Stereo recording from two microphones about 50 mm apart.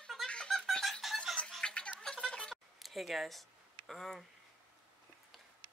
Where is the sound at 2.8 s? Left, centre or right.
Centre.